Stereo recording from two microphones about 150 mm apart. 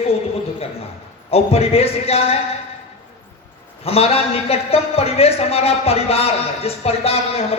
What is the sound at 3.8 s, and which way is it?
A man's voice, 40° left (ahead or behind).